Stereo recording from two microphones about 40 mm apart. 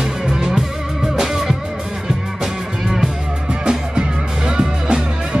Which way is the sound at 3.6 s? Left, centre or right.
Centre.